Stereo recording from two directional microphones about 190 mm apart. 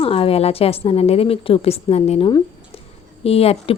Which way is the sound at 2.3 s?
20° left (ahead or behind).